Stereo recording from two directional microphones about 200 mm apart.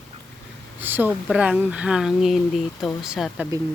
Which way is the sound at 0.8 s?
10° right (ahead or behind).